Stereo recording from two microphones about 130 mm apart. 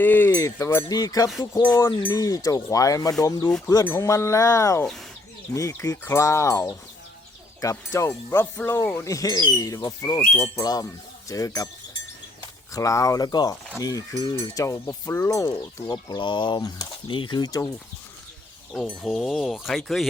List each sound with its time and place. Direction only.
0.0 s speech: 15° left (ahead or behind)
0.3 s speech: 25° left (ahead or behind)
12.7 s speech: 25° left (ahead or behind)
18.7 s speech: 5° left (ahead or behind)